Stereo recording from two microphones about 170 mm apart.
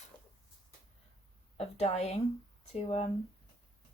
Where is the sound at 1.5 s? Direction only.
40° left (ahead or behind).